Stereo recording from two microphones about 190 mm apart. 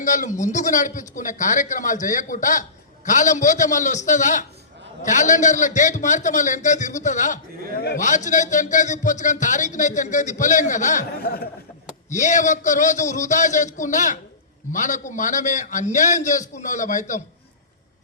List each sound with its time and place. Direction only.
0.0 s speech: 40° left (ahead or behind)
12.1 s speech: 40° left (ahead or behind)